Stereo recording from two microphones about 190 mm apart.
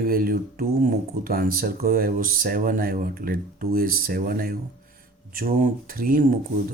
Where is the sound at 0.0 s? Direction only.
50° right (ahead or behind).